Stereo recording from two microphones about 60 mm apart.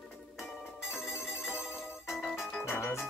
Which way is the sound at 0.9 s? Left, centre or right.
Centre.